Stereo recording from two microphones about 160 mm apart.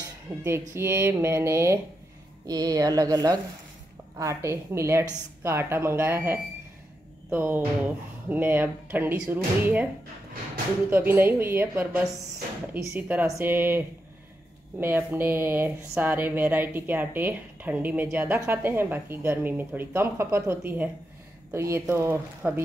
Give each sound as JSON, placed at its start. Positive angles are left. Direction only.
{"t": 0.4, "sound": "speech", "side_deg": -15}
{"t": 10.9, "sound": "speech", "side_deg": -10}